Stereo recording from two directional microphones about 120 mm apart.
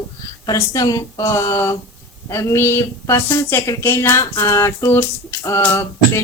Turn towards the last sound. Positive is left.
turn(degrees=25)  # may be behind; listen again after turning